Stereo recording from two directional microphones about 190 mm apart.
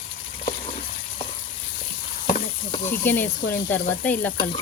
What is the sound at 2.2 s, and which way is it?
Stir, 45° left (ahead or behind).